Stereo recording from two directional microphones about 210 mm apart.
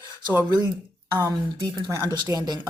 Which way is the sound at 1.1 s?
15° right (ahead or behind).